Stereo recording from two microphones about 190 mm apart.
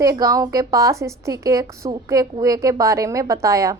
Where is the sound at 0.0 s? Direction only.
20° right (ahead or behind).